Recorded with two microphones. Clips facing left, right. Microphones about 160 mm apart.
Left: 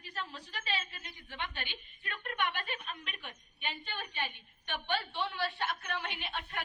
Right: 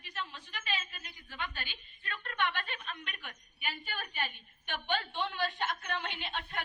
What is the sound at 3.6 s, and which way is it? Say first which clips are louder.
Speech: even; 10° right (ahead or behind).